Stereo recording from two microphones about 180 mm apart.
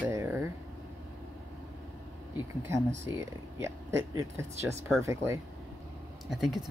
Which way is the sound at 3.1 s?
15° right (ahead or behind).